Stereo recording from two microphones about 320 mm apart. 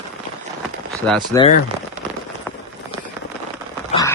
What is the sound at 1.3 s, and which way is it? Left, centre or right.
Speech, centre.